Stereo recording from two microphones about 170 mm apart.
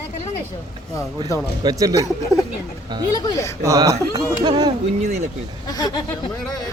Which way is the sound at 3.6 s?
20° right (ahead or behind).